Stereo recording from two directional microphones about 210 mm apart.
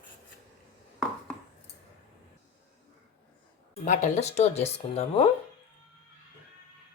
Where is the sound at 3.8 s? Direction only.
35° left (ahead or behind).